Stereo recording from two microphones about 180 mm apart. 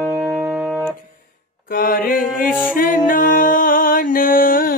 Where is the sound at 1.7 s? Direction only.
50° left (ahead or behind).